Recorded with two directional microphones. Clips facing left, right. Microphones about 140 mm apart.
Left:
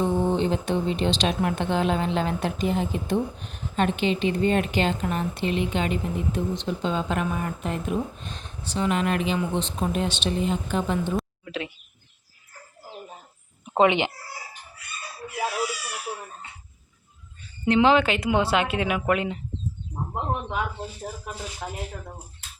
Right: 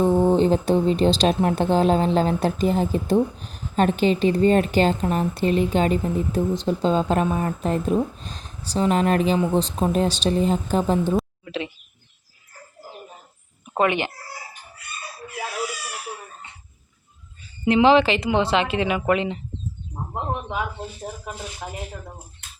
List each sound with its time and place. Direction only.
0.0 s speech: 40° right (ahead or behind)
11.2 s a sound: centre (ahead or behind)
13.7 s speech: 20° left (ahead or behind)
17.7 s speech: 5° right (ahead or behind)
21.6 s speech: 15° right (ahead or behind)